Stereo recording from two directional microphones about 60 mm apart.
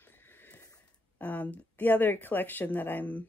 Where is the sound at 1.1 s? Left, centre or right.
Left.